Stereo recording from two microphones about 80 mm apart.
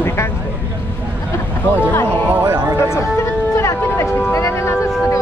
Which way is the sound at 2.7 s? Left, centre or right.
Left.